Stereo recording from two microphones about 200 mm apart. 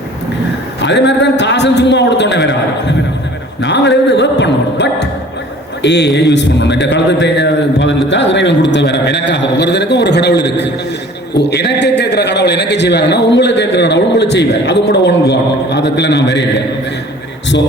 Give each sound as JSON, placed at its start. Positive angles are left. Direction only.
{"t": 0.8, "sound": "a man's voice", "side_deg": 60}